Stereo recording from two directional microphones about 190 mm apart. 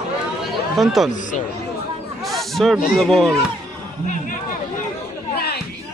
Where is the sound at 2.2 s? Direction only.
Centre (ahead or behind).